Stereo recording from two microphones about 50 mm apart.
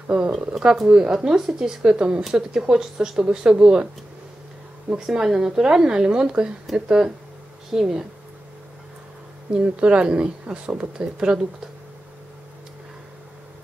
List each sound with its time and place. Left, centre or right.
0.3 s speech: centre
1.1 s speech: centre
4.9 s speech: centre
9.5 s speech: right